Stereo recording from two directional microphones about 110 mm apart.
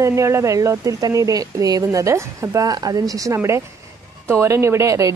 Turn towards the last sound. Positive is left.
turn(degrees=-30)  # may be behind; listen again after turning